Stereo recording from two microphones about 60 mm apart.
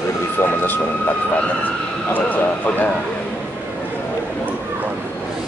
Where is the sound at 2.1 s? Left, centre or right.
Left.